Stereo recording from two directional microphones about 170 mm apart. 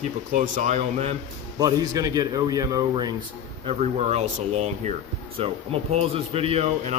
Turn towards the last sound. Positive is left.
turn(degrees=-35)  # may be behind; listen again after turning